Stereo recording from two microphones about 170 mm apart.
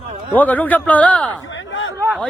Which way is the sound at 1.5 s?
90° left.